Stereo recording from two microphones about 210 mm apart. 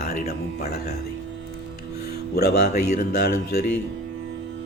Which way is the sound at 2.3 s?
50° left (ahead or behind).